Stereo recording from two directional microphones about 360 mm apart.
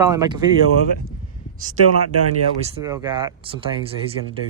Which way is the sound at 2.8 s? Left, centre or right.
Centre.